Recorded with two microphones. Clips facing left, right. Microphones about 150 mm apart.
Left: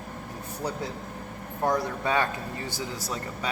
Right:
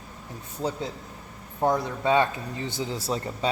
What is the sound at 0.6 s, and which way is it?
A man's voice, 20° right (ahead or behind).